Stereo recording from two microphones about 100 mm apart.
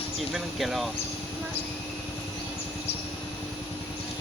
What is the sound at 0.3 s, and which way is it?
Speech, centre (ahead or behind).